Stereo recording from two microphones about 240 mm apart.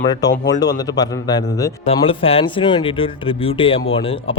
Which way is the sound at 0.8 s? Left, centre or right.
Centre.